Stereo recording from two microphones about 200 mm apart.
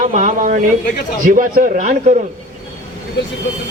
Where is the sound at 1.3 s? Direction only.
45° right (ahead or behind).